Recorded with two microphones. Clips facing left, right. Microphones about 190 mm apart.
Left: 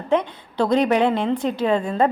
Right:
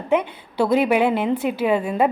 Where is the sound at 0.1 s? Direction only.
10° right (ahead or behind).